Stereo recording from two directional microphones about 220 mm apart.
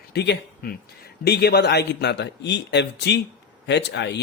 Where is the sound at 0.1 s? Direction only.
50° left (ahead or behind).